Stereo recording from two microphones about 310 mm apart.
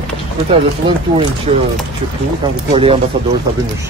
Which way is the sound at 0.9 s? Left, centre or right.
Centre.